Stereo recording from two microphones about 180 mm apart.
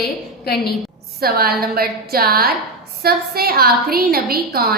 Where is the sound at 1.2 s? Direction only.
55° right (ahead or behind).